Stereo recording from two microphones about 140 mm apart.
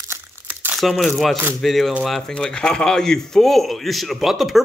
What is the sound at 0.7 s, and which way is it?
Speech, centre (ahead or behind).